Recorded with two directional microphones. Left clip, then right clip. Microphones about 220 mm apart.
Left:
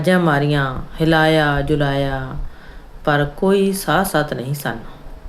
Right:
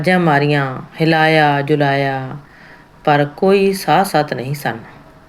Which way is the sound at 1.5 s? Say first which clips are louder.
Right 4 dB; 45° left (ahead or behind).